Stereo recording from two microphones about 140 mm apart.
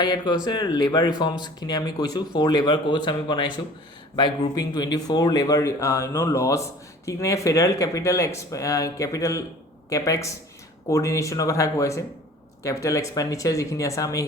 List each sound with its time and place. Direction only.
0.0 s speech: 30° left (ahead or behind)